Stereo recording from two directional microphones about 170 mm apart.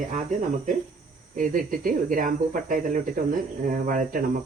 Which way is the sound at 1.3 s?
55° right (ahead or behind).